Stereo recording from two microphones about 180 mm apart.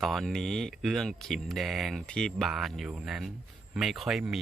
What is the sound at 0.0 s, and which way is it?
Speech, centre (ahead or behind).